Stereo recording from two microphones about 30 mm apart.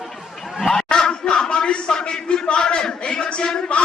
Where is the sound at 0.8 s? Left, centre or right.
Left.